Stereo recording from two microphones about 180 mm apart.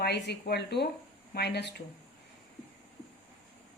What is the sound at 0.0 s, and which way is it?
Speech, 65° left (ahead or behind).